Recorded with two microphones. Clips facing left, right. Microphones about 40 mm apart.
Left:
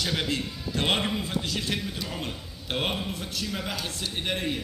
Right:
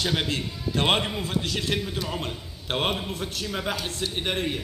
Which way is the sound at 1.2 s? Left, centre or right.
Right.